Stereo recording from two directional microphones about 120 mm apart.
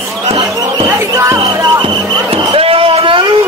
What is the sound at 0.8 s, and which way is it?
Basketball bounce, 25° right (ahead or behind).